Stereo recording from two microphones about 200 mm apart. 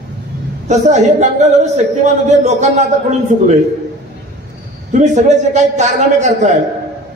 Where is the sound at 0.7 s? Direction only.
35° right (ahead or behind).